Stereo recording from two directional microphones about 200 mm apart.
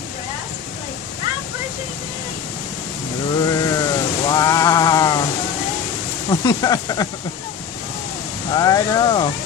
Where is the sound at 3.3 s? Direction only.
15° left (ahead or behind).